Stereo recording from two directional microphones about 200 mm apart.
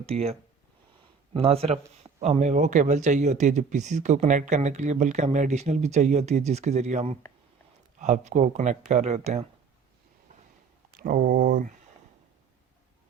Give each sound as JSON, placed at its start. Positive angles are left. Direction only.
{"t": 0.0, "sound": "speech", "side_deg": -30}
{"t": 10.9, "sound": "speech", "side_deg": -45}